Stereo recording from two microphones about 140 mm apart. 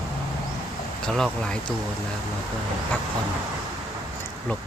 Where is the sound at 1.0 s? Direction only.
5° left (ahead or behind).